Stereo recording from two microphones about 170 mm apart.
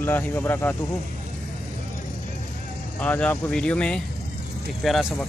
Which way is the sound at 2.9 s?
10° left (ahead or behind).